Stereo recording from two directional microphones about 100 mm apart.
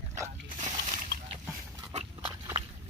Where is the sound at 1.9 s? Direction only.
55° right (ahead or behind).